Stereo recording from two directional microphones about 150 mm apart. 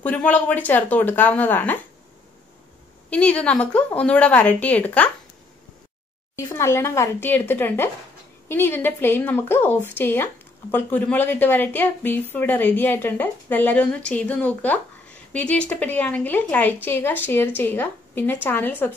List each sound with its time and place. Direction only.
0.0 s a woman's voice: 10° left (ahead or behind)
3.1 s a woman's voice: 10° left (ahead or behind)
6.3 s a woman's voice: 15° left (ahead or behind)